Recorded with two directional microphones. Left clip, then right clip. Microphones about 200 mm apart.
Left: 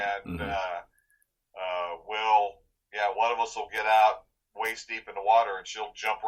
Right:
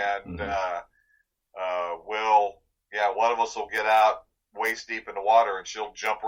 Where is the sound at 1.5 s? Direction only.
20° right (ahead or behind).